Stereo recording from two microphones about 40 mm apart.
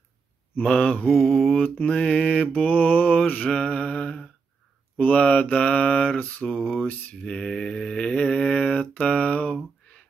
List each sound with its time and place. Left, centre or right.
0.7 s mantra: left
1.0 s mantra: centre
1.6 s mantra: left
3.4 s mantra: left
6.4 s mantra: centre
7.2 s mantra: centre